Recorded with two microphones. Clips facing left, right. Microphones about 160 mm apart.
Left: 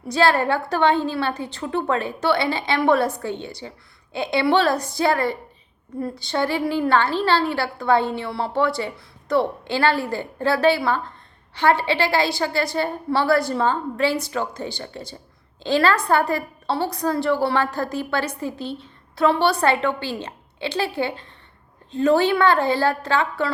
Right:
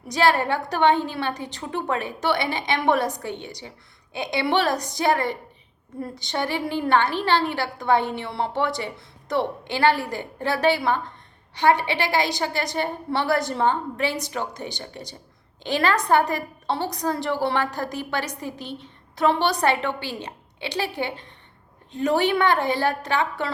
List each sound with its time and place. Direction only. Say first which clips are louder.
0.1 s a woman's voice: left 2 dB; 15° right (ahead or behind)